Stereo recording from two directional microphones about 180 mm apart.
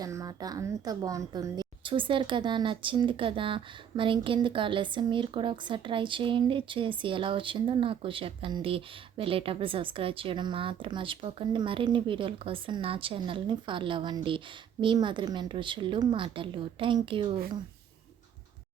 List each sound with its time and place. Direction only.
0.0 s a woman's voice: 20° right (ahead or behind)